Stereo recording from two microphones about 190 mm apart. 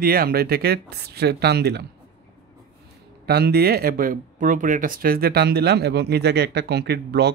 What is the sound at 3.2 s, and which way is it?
Speech, 55° right (ahead or behind).